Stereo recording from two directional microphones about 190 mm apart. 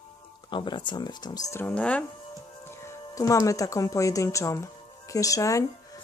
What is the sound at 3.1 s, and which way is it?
Speech, 15° left (ahead or behind).